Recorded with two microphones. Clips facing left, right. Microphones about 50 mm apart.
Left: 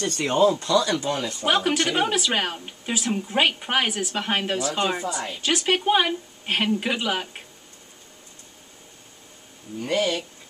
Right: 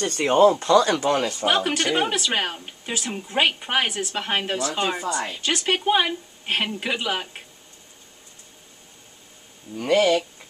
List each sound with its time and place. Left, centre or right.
0.0 s speech: centre
0.4 s speech: right
1.4 s a woman's voice: centre
9.8 s speech: right